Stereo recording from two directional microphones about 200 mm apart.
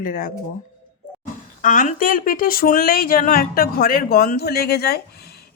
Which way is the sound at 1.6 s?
40° left (ahead or behind).